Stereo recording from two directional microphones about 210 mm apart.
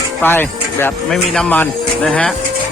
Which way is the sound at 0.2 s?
10° left (ahead or behind).